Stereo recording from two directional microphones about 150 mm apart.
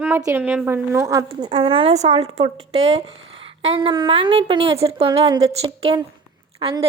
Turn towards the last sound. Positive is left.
turn(degrees=-35)  # may be behind; listen again after turning